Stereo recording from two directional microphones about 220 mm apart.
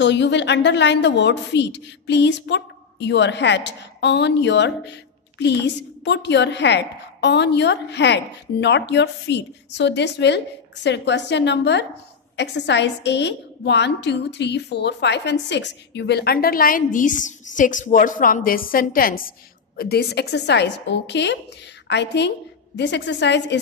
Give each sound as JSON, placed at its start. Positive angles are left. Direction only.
{"t": 0.0, "sound": "a woman's voice", "side_deg": 55}